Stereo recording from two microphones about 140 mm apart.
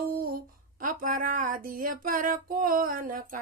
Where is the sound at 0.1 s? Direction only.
90° right.